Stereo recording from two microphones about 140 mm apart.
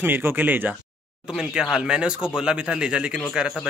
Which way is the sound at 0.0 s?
15° right (ahead or behind).